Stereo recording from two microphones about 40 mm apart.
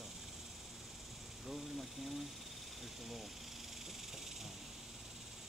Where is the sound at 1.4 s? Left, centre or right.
Centre.